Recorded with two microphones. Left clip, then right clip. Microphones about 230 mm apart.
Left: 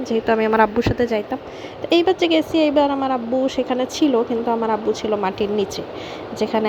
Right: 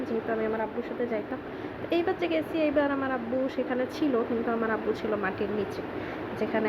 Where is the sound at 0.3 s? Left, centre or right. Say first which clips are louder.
Left 16 dB; left.